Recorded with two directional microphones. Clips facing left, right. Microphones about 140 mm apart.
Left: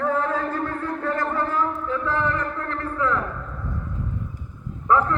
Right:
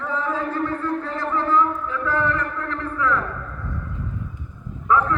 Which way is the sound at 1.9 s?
20° left (ahead or behind).